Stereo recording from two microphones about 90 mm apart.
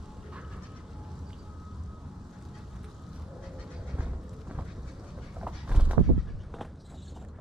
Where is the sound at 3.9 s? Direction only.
10° right (ahead or behind).